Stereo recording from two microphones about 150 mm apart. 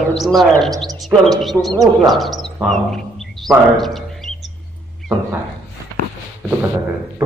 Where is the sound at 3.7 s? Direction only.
Centre (ahead or behind).